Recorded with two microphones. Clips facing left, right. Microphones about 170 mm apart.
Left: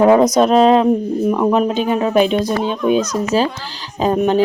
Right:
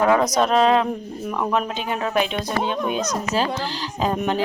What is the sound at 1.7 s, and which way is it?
Speech, 40° left (ahead or behind).